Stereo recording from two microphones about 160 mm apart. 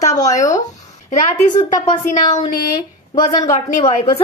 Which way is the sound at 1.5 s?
35° left (ahead or behind).